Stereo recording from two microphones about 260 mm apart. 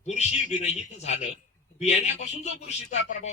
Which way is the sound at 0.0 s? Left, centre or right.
Left.